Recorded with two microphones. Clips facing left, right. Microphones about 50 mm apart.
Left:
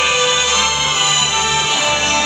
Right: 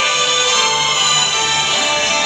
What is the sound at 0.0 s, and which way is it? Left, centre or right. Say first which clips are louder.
Music: left 1 dB; centre.